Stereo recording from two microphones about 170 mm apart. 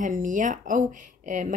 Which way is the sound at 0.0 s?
50° right (ahead or behind).